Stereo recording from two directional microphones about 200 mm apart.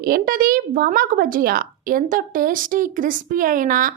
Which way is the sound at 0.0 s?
50° right (ahead or behind).